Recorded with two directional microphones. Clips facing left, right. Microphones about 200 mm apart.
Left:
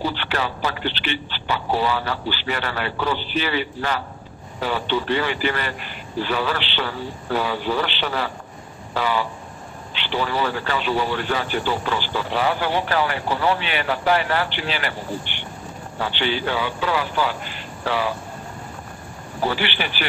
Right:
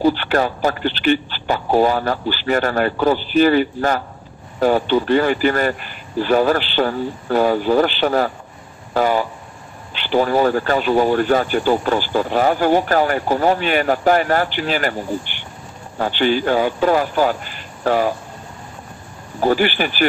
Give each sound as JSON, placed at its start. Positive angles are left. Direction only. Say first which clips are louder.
{"t": 0.0, "sound": "speech", "louder": "right 9 dB", "side_deg": -45}
{"t": 19.4, "sound": "speech", "louder": "right 7 dB", "side_deg": -45}